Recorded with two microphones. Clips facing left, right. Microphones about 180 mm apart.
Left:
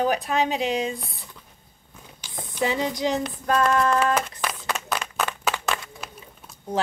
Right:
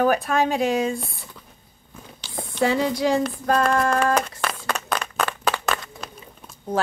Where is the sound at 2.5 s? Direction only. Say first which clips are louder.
Right 4 dB; 20° left (ahead or behind).